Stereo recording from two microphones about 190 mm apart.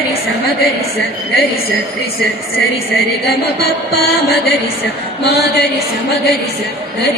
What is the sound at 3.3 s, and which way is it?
Mantra, 55° left (ahead or behind).